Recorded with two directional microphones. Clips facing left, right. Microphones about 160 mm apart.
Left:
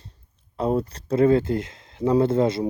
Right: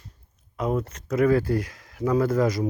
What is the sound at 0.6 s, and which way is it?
Speech, 30° left (ahead or behind).